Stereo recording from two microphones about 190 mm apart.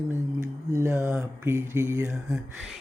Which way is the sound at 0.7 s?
15° right (ahead or behind).